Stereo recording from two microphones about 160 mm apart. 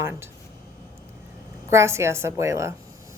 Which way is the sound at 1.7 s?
15° right (ahead or behind).